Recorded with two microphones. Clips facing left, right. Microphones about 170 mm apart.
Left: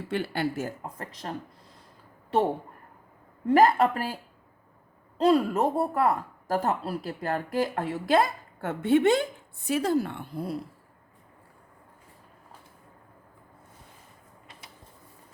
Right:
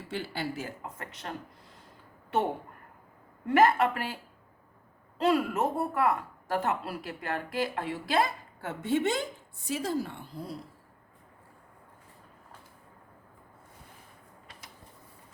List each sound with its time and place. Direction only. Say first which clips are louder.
0.1 s speech: left 6 dB; 60° left (ahead or behind)
0.9 s speech: left 3 dB; 35° left (ahead or behind)
3.4 s speech: left 3 dB; 35° left (ahead or behind)
5.2 s speech: left 4 dB; 35° left (ahead or behind); by 10.6 s 60° left (ahead or behind)